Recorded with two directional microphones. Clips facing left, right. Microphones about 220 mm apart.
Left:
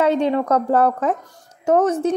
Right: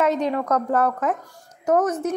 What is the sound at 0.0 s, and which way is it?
A woman's voice, 30° left (ahead or behind).